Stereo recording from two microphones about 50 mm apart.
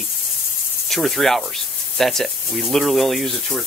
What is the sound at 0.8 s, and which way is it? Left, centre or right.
Speech, centre.